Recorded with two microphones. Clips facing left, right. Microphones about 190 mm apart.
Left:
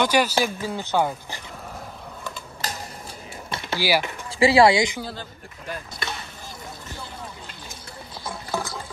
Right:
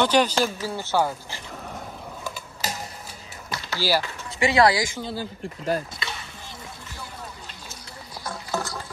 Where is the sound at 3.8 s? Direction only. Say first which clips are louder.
Left 1 dB; 15° left (ahead or behind).